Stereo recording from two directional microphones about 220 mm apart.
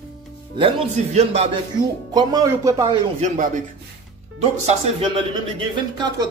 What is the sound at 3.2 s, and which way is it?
Speech, 35° right (ahead or behind).